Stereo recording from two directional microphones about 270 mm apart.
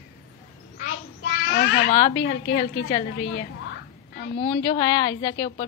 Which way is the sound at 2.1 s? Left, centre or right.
Left.